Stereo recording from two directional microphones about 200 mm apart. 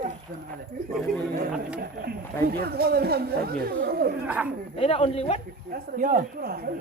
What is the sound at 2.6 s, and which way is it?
Speech, 50° right (ahead or behind).